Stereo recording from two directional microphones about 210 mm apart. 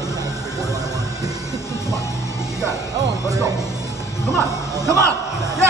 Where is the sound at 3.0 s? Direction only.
15° right (ahead or behind).